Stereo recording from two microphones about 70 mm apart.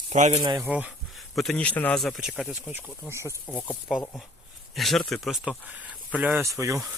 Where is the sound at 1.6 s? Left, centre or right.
Left.